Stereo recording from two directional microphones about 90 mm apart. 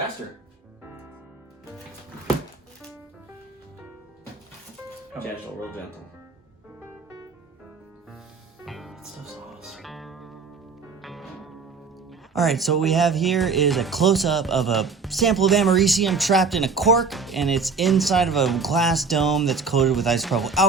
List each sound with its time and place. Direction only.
8.6 s music: centre (ahead or behind)
12.3 s speech: centre (ahead or behind)